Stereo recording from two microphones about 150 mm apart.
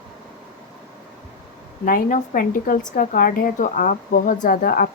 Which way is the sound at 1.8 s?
60° left (ahead or behind).